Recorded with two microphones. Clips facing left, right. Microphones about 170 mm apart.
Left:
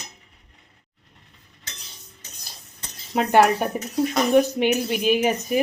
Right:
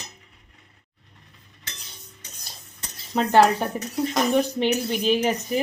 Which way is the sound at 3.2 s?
10° left (ahead or behind).